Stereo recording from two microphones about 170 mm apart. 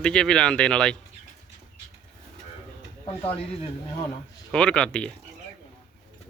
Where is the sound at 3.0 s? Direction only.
35° left (ahead or behind).